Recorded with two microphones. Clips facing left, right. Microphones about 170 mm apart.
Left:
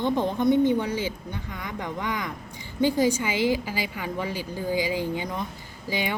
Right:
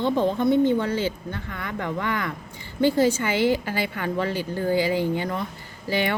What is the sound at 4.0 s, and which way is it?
A woman's voice, 10° left (ahead or behind).